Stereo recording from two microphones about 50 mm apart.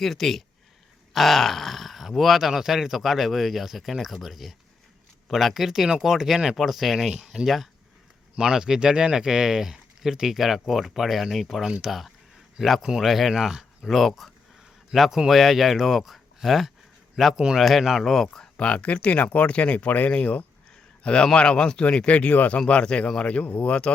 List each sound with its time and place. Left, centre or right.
0.0 s speech: centre
18.5 s a man's voice: left